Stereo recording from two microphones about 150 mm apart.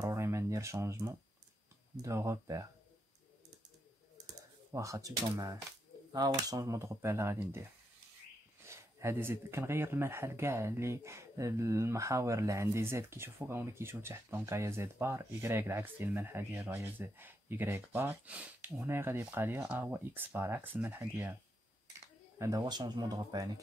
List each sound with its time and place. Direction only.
0.0 s a sound: 20° right (ahead or behind)
2.0 s speech: 20° right (ahead or behind)
4.7 s speech: 20° right (ahead or behind)
8.6 s speech: 20° right (ahead or behind)
22.4 s speech: 25° right (ahead or behind)